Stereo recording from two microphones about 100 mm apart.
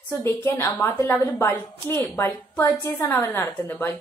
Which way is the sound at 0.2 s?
25° left (ahead or behind).